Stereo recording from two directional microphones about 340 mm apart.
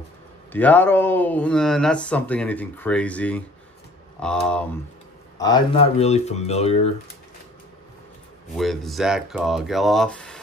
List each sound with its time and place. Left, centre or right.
0.5 s speech: centre
5.4 s speech: centre
8.5 s speech: centre